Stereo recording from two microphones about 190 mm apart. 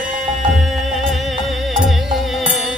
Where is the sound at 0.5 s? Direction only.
Centre (ahead or behind).